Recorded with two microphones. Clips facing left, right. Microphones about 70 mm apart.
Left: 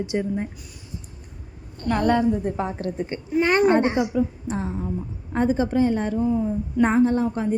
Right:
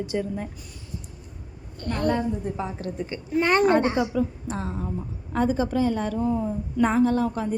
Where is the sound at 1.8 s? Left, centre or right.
Left.